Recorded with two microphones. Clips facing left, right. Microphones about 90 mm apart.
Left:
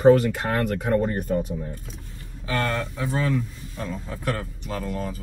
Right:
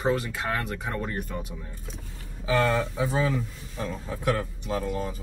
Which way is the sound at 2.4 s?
10° right (ahead or behind).